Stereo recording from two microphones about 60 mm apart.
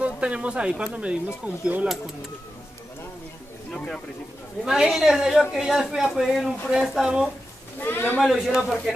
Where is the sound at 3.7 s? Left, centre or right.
Centre.